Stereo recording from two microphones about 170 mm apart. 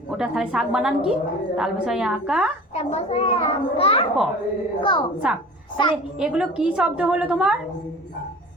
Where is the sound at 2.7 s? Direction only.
40° left (ahead or behind).